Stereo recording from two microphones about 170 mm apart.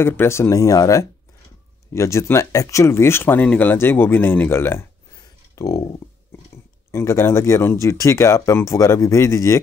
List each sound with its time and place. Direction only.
0.0 s speech: 15° left (ahead or behind)
6.9 s speech: 15° left (ahead or behind)